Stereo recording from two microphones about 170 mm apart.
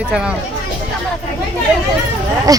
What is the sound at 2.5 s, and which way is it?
Speech, 20° right (ahead or behind).